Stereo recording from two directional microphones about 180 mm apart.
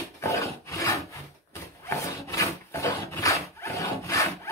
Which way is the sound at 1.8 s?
15° left (ahead or behind).